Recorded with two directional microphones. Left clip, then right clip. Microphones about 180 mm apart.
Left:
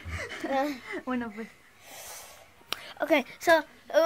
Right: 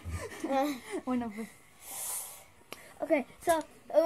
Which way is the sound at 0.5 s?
35° right (ahead or behind).